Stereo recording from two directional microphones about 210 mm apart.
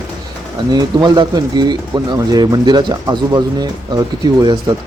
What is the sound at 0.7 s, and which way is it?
Speech, 20° right (ahead or behind).